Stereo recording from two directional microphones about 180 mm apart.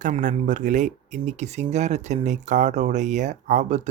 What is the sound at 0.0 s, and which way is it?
Speech, 45° right (ahead or behind).